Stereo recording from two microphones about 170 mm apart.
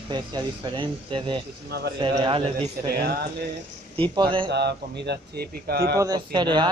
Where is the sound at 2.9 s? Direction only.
65° right (ahead or behind).